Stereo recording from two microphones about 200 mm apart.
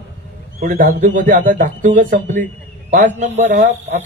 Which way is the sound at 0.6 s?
45° right (ahead or behind).